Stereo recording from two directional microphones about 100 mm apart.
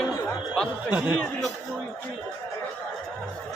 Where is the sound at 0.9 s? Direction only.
15° right (ahead or behind).